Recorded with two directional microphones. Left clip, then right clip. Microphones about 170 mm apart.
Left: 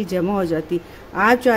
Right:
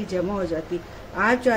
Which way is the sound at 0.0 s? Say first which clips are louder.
Left 5 dB; 55° left (ahead or behind).